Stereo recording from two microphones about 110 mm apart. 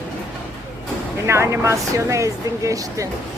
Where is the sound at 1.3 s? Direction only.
25° right (ahead or behind).